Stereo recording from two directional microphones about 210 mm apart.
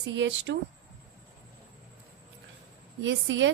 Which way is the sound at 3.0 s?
60° right (ahead or behind).